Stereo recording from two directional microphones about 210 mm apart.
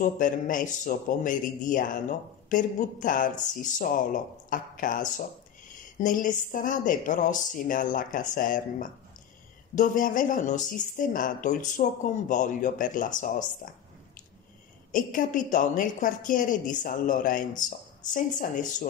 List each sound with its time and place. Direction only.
0.0 s a woman's voice: 40° left (ahead or behind)
14.9 s a woman's voice: 40° left (ahead or behind)